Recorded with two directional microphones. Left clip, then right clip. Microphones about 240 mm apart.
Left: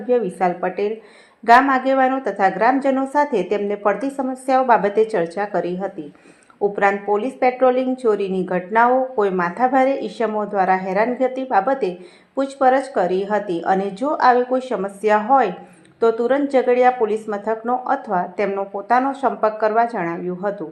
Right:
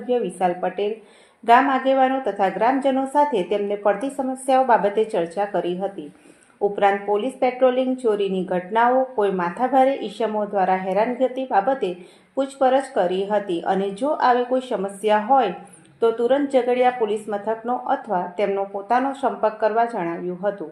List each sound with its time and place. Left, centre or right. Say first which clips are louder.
0.1 s a woman's voice: left 3 dB; left